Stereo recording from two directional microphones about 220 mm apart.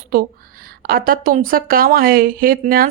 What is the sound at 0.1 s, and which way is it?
A woman's voice, 40° right (ahead or behind).